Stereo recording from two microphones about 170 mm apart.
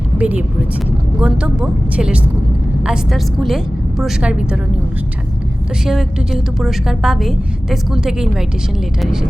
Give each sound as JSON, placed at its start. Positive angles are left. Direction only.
{"t": 0.2, "sound": "a woman's voice", "side_deg": -10}
{"t": 5.8, "sound": "a woman's voice", "side_deg": -5}